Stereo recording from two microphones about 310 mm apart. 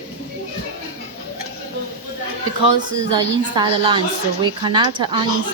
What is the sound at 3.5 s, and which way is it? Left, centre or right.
A woman's voice, centre.